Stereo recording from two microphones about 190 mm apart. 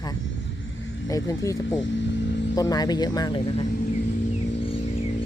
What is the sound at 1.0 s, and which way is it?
Speech, 20° left (ahead or behind).